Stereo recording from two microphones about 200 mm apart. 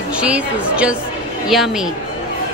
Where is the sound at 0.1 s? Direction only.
5° right (ahead or behind).